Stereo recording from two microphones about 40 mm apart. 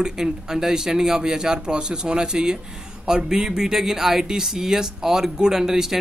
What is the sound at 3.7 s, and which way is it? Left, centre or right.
Speech, centre.